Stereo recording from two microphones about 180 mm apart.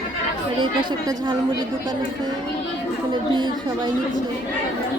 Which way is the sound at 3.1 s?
25° right (ahead or behind).